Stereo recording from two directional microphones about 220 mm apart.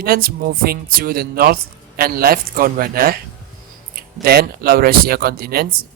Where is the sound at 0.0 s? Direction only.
40° right (ahead or behind).